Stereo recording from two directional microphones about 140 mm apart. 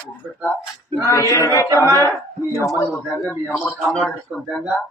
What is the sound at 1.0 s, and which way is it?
Speech, 20° left (ahead or behind).